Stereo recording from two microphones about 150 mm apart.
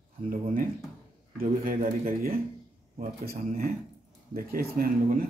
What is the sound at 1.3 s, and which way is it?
A man's voice, 75° right (ahead or behind).